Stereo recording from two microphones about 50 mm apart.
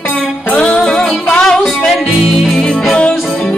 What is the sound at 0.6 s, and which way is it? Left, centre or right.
Music, centre.